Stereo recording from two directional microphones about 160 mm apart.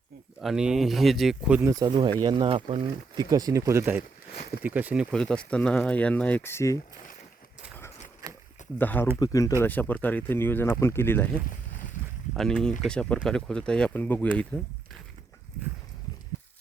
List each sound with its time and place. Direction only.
0.4 s speech: 5° right (ahead or behind)
1.6 s speech: 20° right (ahead or behind)
5.1 s speech: 5° left (ahead or behind)
8.8 s speech: 10° left (ahead or behind)
9.1 s speech: 20° left (ahead or behind)
9.6 s speech: 10° left (ahead or behind)
12.3 s speech: centre (ahead or behind)